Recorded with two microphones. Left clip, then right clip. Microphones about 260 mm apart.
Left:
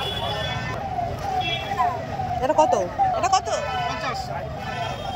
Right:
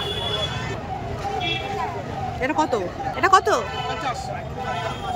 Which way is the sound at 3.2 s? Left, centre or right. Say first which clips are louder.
Right 5 dB; right.